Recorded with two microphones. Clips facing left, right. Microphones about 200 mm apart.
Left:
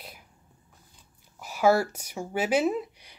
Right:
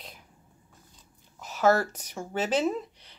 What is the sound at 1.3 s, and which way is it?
Speech, 10° left (ahead or behind).